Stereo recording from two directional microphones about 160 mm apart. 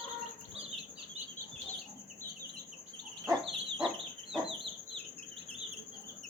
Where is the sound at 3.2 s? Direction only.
Centre (ahead or behind).